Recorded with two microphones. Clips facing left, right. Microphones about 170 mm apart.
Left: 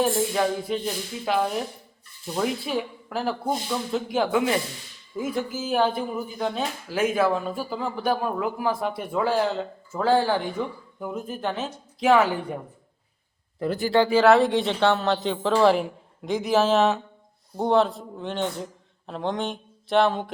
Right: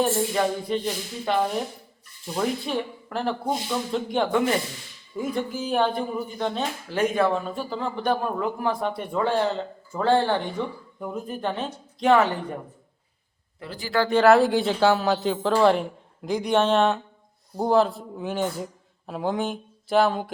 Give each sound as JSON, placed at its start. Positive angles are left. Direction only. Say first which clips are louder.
{"t": 0.0, "sound": "speech", "louder": "even", "side_deg": 0}
{"t": 13.6, "sound": "speech", "louder": "left 10 dB", "side_deg": 50}
{"t": 14.1, "sound": "speech", "louder": "right 3 dB", "side_deg": 0}